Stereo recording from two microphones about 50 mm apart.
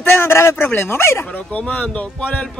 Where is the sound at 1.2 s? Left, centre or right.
Left.